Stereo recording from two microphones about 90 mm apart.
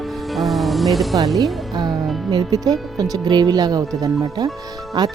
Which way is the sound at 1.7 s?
45° right (ahead or behind).